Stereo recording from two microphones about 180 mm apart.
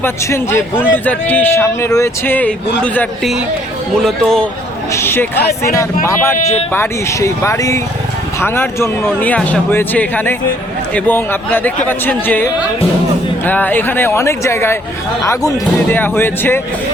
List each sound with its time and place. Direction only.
0.0 s a man's voice: 15° left (ahead or behind)
4.9 s a man's voice: 15° left (ahead or behind)
6.3 s speech: 40° left (ahead or behind)
6.7 s a man's voice: 15° left (ahead or behind)